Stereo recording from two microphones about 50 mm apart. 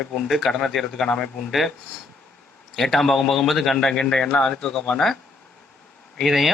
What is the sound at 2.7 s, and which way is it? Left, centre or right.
Speech, centre.